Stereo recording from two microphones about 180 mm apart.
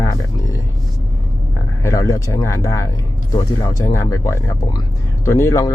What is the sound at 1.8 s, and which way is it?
Speech, 20° left (ahead or behind).